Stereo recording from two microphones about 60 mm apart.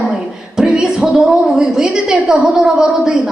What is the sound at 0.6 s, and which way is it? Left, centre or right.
A woman's voice, centre.